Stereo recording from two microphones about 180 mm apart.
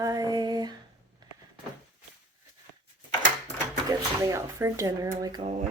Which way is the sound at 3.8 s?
15° right (ahead or behind).